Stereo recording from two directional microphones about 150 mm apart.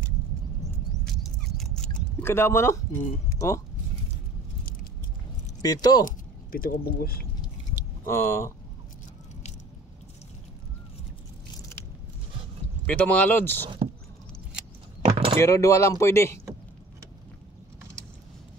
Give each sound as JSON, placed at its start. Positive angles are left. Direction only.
{"t": 1.0, "sound": "a sound", "side_deg": 0}
{"t": 2.2, "sound": "speech", "side_deg": 15}
{"t": 5.6, "sound": "speech", "side_deg": 25}
{"t": 6.0, "sound": "speech", "side_deg": 70}
{"t": 8.1, "sound": "speech", "side_deg": 15}
{"t": 12.8, "sound": "speech", "side_deg": 10}
{"t": 15.0, "sound": "door", "side_deg": -40}
{"t": 15.3, "sound": "speech", "side_deg": 20}